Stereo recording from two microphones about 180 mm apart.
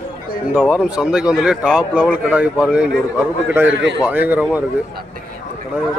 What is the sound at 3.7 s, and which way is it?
Speech, 80° right.